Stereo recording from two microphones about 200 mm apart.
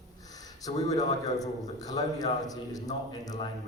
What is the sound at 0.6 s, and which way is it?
A man's voice, 20° left (ahead or behind).